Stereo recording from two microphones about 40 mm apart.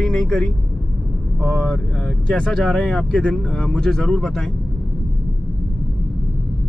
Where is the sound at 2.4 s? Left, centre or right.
Centre.